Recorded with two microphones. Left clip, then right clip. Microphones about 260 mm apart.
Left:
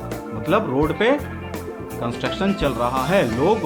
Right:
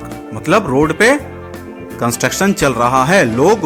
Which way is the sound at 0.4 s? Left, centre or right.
Right.